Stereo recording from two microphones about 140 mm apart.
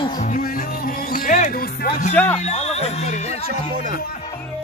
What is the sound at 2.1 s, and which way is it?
Speech, 15° left (ahead or behind).